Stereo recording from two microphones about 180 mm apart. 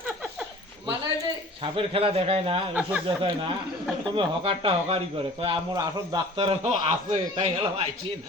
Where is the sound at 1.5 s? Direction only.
30° right (ahead or behind).